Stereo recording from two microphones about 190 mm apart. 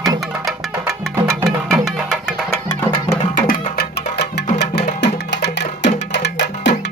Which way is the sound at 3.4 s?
55° left (ahead or behind).